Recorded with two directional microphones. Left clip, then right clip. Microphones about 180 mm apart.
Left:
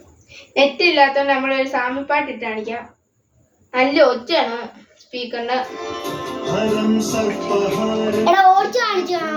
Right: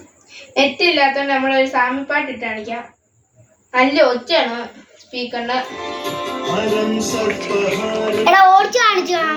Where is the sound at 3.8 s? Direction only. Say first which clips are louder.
Right 1 dB; 20° left (ahead or behind).